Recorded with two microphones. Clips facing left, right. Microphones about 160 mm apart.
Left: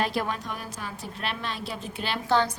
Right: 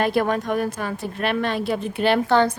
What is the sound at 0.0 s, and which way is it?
A woman's voice, 55° right (ahead or behind).